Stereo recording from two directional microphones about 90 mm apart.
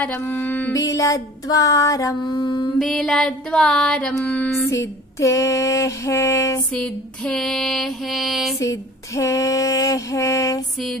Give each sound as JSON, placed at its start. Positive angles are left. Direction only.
{"t": 0.0, "sound": "music", "side_deg": 15}
{"t": 0.7, "sound": "female singing", "side_deg": 40}
{"t": 2.2, "sound": "mantra", "side_deg": 60}
{"t": 2.8, "sound": "music", "side_deg": 5}
{"t": 4.6, "sound": "female singing", "side_deg": 35}
{"t": 6.7, "sound": "mantra", "side_deg": 10}
{"t": 8.5, "sound": "female singing", "side_deg": 35}